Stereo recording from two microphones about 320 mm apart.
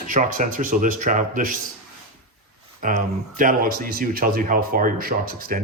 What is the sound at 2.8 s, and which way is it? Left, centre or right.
A man's voice, right.